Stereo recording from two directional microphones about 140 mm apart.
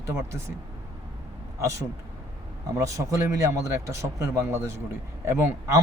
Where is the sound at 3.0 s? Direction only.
20° right (ahead or behind).